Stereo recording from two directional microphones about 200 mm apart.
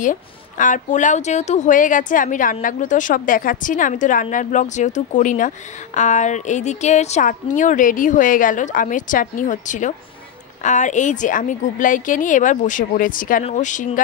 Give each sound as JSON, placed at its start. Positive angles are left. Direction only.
{"t": 0.0, "sound": "a woman's voice", "side_deg": 40}